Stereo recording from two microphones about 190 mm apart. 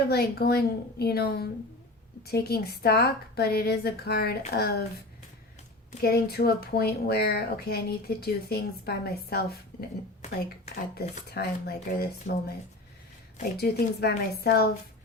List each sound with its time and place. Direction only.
0.0 s speech: 55° left (ahead or behind)
6.0 s speech: 55° left (ahead or behind)
10.9 s speech: 55° left (ahead or behind)
12.3 s speech: 40° left (ahead or behind)
13.6 s speech: 55° left (ahead or behind)